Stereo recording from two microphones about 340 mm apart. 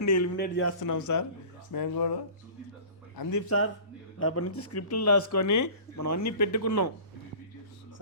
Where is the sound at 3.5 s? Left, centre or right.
Left.